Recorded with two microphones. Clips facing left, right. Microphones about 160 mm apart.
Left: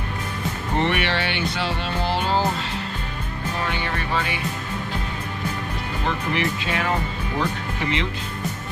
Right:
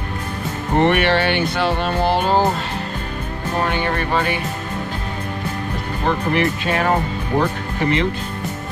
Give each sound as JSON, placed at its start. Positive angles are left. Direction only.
{"t": 0.7, "sound": "speech", "side_deg": -50}
{"t": 3.5, "sound": "speech", "side_deg": -50}
{"t": 6.0, "sound": "speech", "side_deg": -50}